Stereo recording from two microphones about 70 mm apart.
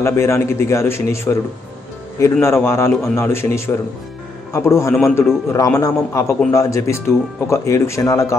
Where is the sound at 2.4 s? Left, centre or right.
Left.